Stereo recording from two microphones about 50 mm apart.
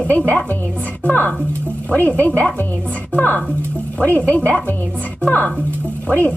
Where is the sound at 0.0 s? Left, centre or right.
Left.